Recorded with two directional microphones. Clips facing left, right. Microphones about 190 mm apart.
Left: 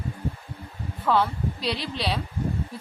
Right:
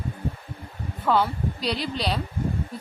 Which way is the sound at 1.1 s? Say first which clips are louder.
Right 1 dB; centre (ahead or behind).